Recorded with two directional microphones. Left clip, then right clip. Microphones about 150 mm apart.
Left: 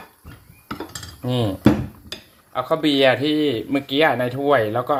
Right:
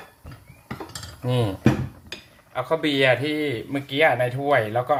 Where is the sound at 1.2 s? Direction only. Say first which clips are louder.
Left 2 dB; 10° left (ahead or behind).